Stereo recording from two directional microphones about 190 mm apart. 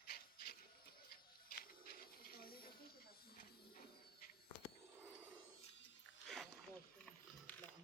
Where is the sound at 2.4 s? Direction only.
50° left (ahead or behind).